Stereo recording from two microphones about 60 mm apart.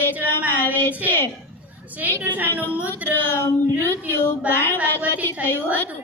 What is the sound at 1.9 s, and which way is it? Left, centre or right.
Speech, right.